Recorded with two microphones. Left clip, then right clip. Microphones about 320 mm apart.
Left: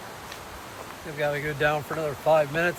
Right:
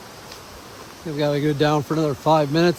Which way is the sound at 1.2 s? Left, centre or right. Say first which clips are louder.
Right 5 dB; centre.